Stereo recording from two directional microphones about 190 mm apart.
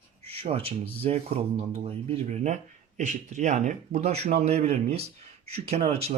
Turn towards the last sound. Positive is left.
turn(degrees=-30)  # may be behind; listen again after turning